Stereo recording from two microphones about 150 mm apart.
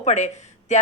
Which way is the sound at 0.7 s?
50° left (ahead or behind).